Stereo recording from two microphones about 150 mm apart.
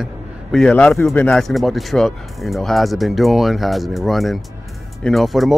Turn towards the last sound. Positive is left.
turn(degrees=0)  # may be behind; listen again after turning